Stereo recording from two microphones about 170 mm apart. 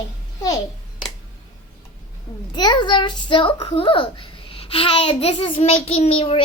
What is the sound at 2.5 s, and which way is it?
A child's voice, 25° left (ahead or behind).